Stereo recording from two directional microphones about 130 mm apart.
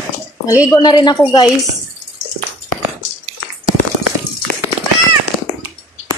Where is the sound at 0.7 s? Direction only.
30° left (ahead or behind).